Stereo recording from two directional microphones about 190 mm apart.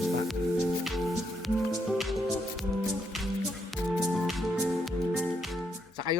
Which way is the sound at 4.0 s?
Centre (ahead or behind).